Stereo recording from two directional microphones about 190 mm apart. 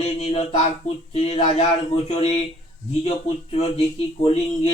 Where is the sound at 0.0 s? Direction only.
35° left (ahead or behind).